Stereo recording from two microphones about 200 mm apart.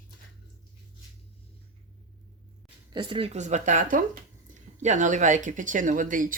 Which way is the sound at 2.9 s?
25° right (ahead or behind).